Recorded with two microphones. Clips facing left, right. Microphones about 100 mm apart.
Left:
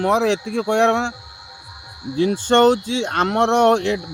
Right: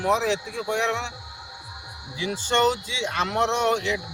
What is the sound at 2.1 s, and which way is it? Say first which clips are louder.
Speech: left 8 dB; 55° left (ahead or behind).